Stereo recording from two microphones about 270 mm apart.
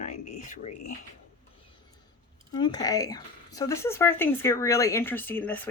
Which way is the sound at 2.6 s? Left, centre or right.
Centre.